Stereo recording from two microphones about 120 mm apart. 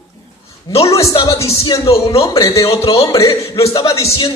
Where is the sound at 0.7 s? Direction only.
30° left (ahead or behind).